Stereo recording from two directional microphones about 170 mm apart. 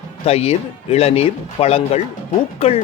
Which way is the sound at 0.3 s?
35° left (ahead or behind).